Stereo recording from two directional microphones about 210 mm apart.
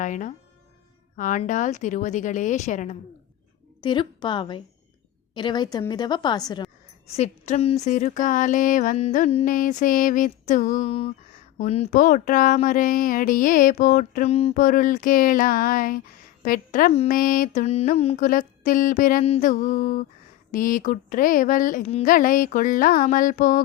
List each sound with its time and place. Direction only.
0.0 s speech: 35° left (ahead or behind)
3.8 s a woman's voice: 20° left (ahead or behind)
7.1 s speech: 30° left (ahead or behind)